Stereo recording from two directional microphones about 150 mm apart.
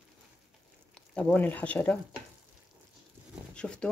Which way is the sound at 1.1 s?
10° left (ahead or behind).